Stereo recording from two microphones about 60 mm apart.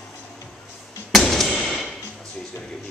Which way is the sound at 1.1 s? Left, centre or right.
Centre.